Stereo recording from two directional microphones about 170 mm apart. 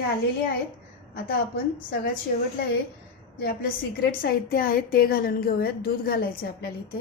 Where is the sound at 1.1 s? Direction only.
60° left (ahead or behind).